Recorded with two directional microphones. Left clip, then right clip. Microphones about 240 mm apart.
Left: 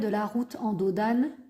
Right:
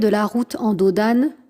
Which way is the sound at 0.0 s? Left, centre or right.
Right.